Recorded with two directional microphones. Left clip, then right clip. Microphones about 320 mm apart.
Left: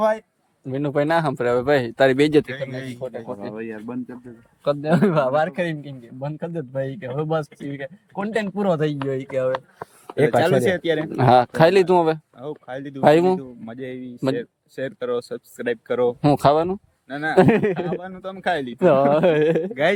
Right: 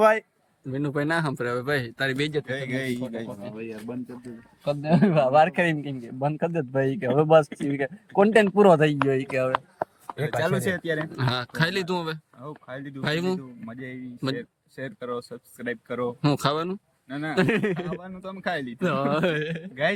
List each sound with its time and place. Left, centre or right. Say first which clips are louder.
0.0 s speech: right 1 dB; centre
0.7 s speech: left 6 dB; centre
2.5 s a man's voice: even; right
3.5 s speech: left 4 dB; left
4.6 s a man's voice: left 4 dB; centre
10.6 s speech: left 7 dB; centre